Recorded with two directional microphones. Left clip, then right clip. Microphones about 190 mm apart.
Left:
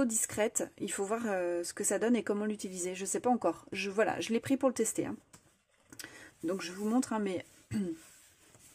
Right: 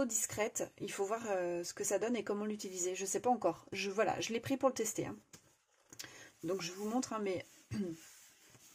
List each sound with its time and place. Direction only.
0.0 s speech: 30° left (ahead or behind)